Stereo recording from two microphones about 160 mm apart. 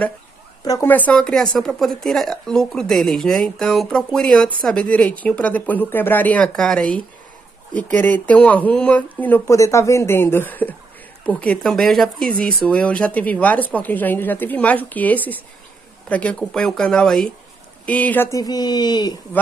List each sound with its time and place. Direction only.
0.7 s speech: 15° left (ahead or behind)
18.4 s speech: 25° left (ahead or behind)